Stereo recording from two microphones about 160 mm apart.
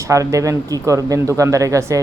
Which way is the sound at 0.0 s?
20° right (ahead or behind).